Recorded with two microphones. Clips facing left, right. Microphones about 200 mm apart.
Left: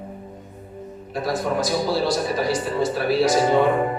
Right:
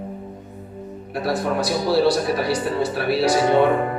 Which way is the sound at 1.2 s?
65° right (ahead or behind).